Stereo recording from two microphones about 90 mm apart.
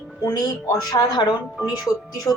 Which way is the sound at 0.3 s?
45° left (ahead or behind).